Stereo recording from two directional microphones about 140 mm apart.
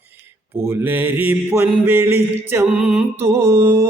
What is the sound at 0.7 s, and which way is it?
Mantra, 15° right (ahead or behind).